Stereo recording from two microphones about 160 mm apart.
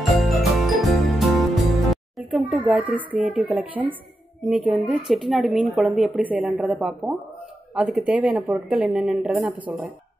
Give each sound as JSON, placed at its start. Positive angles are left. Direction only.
{"t": 0.2, "sound": "music", "side_deg": 0}
{"t": 3.2, "sound": "a woman's voice", "side_deg": -5}